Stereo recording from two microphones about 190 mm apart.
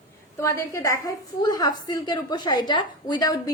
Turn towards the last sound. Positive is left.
turn(degrees=20)  # may be behind; listen again after turning